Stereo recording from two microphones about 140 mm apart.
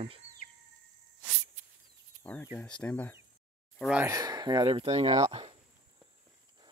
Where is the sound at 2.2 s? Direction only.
15° left (ahead or behind).